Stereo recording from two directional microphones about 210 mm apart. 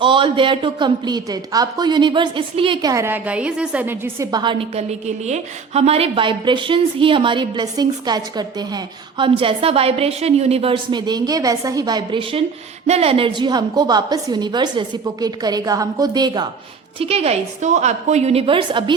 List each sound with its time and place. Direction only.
0.0 s a woman's voice: 25° right (ahead or behind)